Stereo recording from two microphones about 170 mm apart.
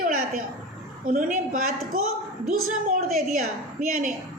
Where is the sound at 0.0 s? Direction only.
55° right (ahead or behind).